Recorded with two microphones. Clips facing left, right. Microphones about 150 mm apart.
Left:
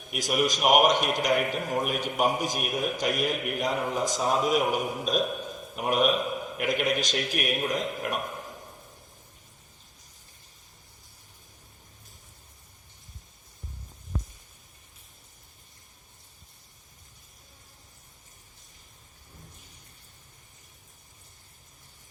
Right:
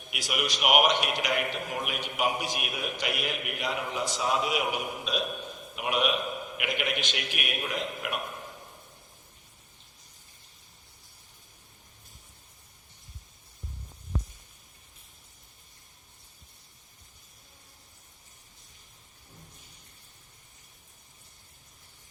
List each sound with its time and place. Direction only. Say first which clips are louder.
0.1 s a man's voice: left 6 dB; 45° left (ahead or behind)